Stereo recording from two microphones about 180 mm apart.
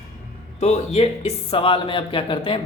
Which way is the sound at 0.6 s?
35° left (ahead or behind).